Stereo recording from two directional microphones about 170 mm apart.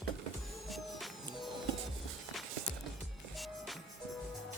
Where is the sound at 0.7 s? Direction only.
Centre (ahead or behind).